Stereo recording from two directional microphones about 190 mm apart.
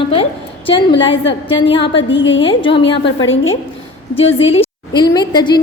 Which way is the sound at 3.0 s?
90° left.